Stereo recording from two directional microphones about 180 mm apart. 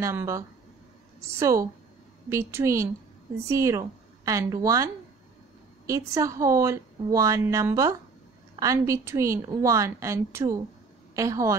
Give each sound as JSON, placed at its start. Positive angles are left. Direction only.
{"t": 0.0, "sound": "a woman's voice", "side_deg": -15}